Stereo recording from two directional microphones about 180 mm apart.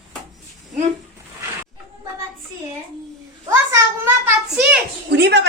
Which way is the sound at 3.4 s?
15° right (ahead or behind).